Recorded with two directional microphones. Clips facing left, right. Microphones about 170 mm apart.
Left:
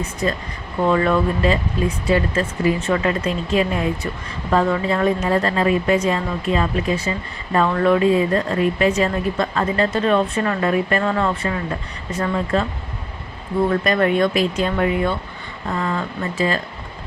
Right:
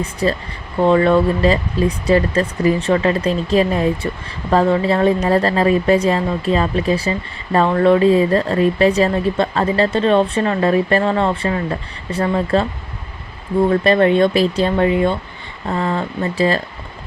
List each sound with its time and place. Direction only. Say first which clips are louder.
0.0 s speech: right 4 dB; 35° right (ahead or behind)
13.7 s speech: right 5 dB; 30° right (ahead or behind)